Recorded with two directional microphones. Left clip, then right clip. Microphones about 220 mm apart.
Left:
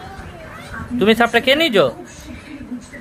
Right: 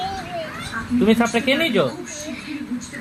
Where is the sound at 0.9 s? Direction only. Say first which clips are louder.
Left 5 dB; 30° left (ahead or behind).